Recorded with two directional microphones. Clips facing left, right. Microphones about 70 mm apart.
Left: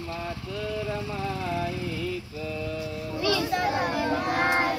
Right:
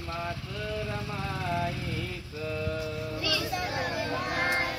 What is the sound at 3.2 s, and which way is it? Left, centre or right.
Music, left.